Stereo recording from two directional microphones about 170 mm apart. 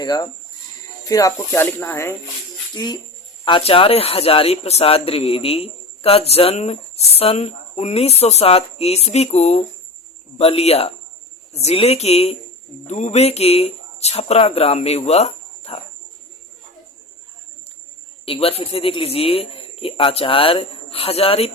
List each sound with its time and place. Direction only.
0.0 s speech: 25° left (ahead or behind)
18.3 s speech: 35° left (ahead or behind)